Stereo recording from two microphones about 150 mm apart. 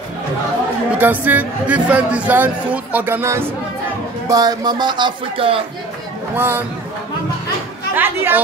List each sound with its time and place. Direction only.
0.9 s speech: 10° right (ahead or behind)
4.3 s speech: 25° right (ahead or behind)
6.3 s speech: 15° right (ahead or behind)
7.9 s speech: 15° right (ahead or behind)